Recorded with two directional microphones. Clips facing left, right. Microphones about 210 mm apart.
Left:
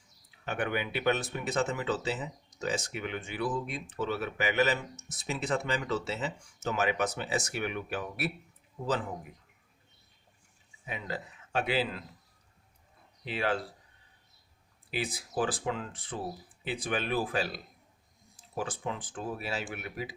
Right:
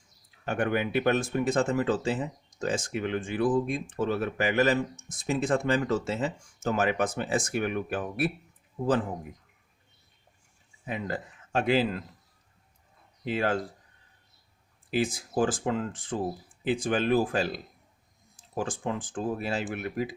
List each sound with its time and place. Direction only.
0.4 s speech: 45° right (ahead or behind)
10.8 s speech: 50° right (ahead or behind)
13.2 s speech: 45° right (ahead or behind)
14.8 s speech: 45° right (ahead or behind)